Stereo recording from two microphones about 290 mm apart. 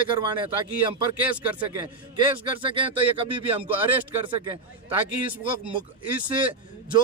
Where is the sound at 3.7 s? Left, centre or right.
Centre.